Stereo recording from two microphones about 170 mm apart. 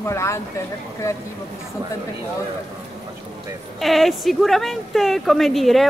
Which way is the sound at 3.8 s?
Centre (ahead or behind).